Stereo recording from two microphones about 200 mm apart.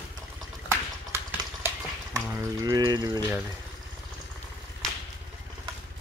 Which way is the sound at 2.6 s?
20° right (ahead or behind).